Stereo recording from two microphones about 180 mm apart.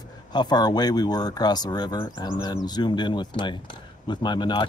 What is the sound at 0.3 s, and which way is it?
Speech, 25° left (ahead or behind).